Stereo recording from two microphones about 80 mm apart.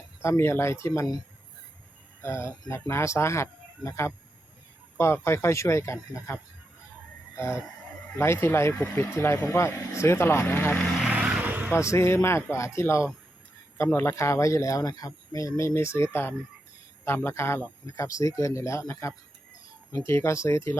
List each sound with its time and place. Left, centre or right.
0.2 s speech: left
2.2 s speech: left
7.3 s a sound: left
8.1 s speech: left
11.2 s vehicle: centre
11.7 s speech: left
17.1 s speech: left